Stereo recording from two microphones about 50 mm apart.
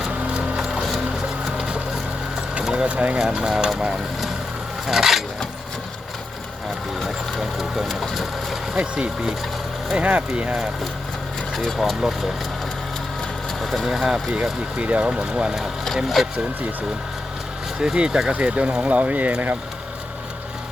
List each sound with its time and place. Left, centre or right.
0.0 s a sound: centre
1.5 s boat: centre
2.7 s speech: right
3.2 s speech: centre
4.9 s a sound: centre
7.0 s speech: centre
8.1 s crushing: centre
8.7 s speech: centre
9.9 s speech: right
11.5 s speech: centre
13.6 s speech: centre
14.8 s speech: right
16.2 s speech: centre
17.7 s speech: centre